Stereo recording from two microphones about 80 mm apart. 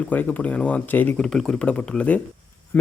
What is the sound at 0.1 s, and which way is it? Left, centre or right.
A man's voice, left.